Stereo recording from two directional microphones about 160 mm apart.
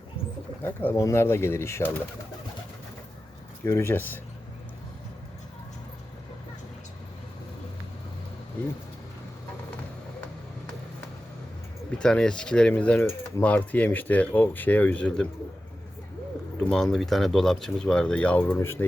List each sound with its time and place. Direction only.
0.6 s coin: 15° left (ahead or behind)
3.6 s coin: 15° left (ahead or behind)
11.9 s coin: 5° left (ahead or behind)
16.6 s speech: 5° left (ahead or behind)